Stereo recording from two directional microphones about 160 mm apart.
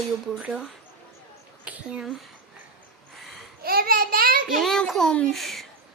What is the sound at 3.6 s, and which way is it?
Speech, 70° right (ahead or behind).